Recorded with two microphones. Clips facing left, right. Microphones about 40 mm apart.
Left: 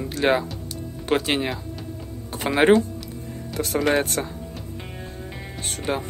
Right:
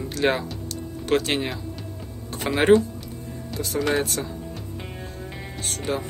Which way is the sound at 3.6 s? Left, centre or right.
Left.